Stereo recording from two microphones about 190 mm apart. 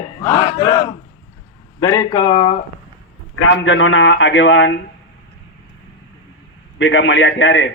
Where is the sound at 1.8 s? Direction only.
20° left (ahead or behind).